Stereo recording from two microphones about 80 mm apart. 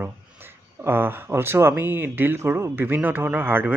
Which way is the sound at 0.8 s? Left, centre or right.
Right.